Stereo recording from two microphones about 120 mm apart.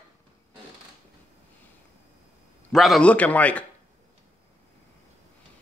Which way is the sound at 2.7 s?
Centre (ahead or behind).